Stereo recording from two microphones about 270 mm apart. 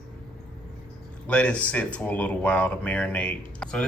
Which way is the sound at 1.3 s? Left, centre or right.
Centre.